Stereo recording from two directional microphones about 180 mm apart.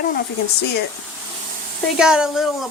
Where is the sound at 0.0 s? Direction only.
55° left (ahead or behind).